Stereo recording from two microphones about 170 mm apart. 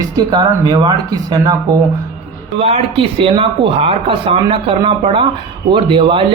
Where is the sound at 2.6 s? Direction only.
35° right (ahead or behind).